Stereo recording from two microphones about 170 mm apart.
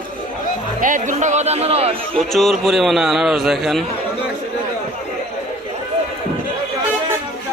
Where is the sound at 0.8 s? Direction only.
50° right (ahead or behind).